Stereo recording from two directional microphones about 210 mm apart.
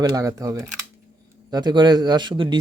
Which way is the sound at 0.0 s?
15° right (ahead or behind).